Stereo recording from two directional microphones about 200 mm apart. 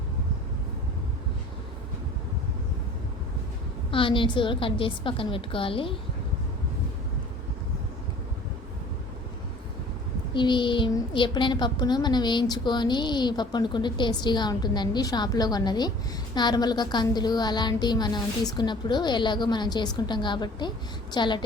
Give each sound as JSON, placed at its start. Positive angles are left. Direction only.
{"t": 3.9, "sound": "speech", "side_deg": 25}
{"t": 10.3, "sound": "speech", "side_deg": 25}